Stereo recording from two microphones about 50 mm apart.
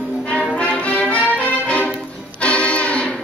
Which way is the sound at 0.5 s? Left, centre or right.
Left.